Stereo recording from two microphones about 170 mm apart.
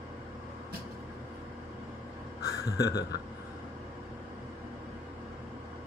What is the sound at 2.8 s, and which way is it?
Speech, 20° left (ahead or behind).